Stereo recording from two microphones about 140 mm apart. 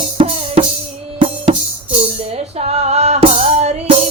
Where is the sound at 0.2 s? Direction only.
45° right (ahead or behind).